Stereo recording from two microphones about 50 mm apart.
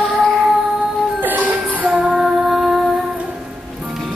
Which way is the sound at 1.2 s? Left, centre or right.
Right.